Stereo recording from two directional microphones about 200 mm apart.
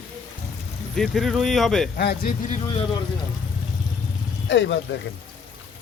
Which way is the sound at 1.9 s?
50° left (ahead or behind).